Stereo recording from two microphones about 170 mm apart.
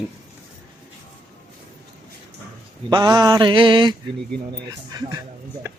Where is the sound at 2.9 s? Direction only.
25° right (ahead or behind).